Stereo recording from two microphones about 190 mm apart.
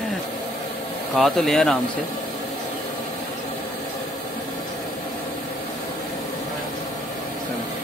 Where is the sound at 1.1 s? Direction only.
Centre (ahead or behind).